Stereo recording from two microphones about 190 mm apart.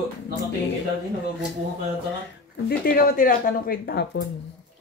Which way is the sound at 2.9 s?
45° left (ahead or behind).